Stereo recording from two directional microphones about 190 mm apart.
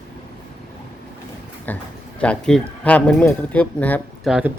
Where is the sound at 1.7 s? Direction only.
10° left (ahead or behind).